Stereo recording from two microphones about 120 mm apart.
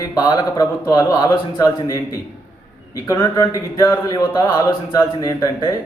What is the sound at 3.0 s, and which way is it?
Speech, 30° left (ahead or behind).